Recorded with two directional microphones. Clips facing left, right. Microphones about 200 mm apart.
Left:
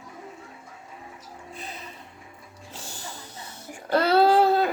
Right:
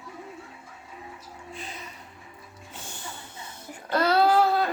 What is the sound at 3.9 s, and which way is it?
Child singing, 30° left (ahead or behind).